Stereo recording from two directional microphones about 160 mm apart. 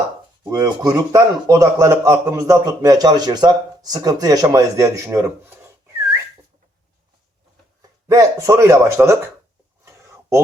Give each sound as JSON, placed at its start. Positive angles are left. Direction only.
{"t": 0.5, "sound": "speech", "side_deg": -20}
{"t": 7.8, "sound": "speech", "side_deg": -20}
{"t": 9.8, "sound": "a sound", "side_deg": -20}